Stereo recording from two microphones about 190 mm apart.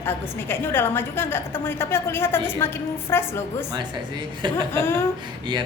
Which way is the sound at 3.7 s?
25° right (ahead or behind).